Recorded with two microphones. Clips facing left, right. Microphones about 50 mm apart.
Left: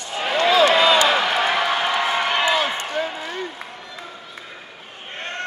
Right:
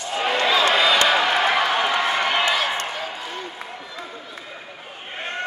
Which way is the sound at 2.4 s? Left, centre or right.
Centre.